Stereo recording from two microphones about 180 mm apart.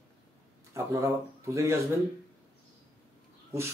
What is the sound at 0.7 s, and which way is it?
A man's voice, 15° right (ahead or behind).